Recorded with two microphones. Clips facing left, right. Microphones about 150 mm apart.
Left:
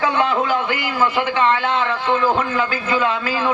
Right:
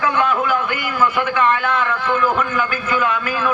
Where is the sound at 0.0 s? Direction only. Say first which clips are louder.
Even; 30° left (ahead or behind).